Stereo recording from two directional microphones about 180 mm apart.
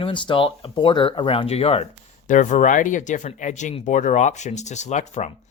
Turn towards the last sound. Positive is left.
turn(degrees=40)  # may be behind; listen again after turning